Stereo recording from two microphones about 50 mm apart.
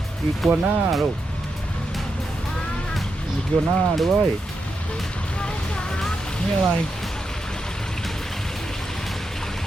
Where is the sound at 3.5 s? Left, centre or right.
Left.